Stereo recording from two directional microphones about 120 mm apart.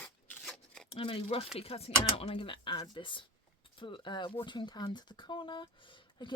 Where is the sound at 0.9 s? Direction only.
50° left (ahead or behind).